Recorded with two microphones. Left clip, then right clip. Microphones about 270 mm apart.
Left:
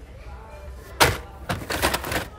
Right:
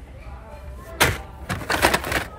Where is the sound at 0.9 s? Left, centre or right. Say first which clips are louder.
Left 1 dB; left.